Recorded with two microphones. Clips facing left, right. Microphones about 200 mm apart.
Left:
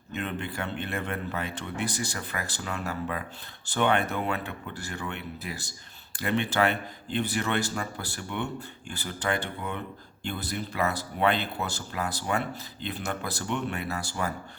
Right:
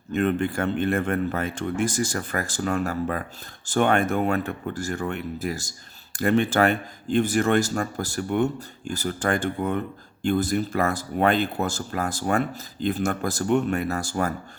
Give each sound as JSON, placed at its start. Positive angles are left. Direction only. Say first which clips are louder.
{"t": 0.1, "sound": "speech", "louder": "right 10 dB", "side_deg": -50}